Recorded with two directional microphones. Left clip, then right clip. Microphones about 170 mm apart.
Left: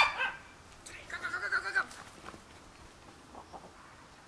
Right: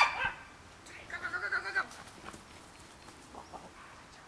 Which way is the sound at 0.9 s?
50° left (ahead or behind).